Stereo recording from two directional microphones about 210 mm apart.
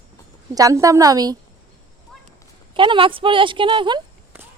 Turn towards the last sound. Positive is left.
turn(degrees=-25)  # may be behind; listen again after turning